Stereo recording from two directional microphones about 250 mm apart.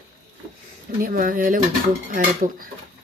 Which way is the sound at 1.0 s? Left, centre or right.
Right.